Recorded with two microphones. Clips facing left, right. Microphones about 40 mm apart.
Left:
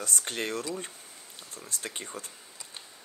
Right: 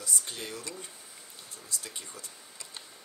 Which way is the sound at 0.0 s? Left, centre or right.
Left.